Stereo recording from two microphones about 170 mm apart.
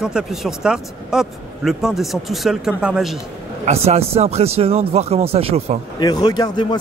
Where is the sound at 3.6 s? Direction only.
40° right (ahead or behind).